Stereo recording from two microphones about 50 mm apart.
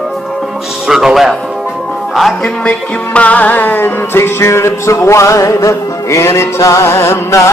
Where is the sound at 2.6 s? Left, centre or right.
Left.